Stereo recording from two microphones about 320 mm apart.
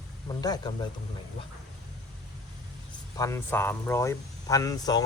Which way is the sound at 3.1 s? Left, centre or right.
Centre.